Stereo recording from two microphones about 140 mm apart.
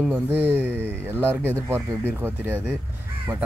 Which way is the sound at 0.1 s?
15° right (ahead or behind).